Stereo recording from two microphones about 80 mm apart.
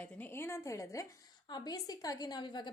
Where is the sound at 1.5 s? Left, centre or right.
Left.